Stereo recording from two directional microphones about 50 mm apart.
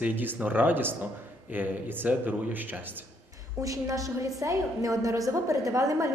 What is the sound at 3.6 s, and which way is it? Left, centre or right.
A woman's voice, right.